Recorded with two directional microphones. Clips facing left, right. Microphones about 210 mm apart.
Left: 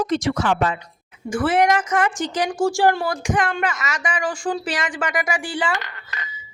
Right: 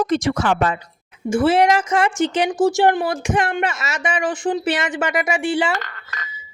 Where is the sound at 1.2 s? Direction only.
25° right (ahead or behind).